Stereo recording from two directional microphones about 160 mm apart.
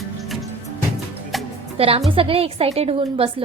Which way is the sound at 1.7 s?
35° right (ahead or behind).